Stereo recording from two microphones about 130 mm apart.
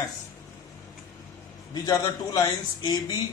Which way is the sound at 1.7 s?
30° left (ahead or behind).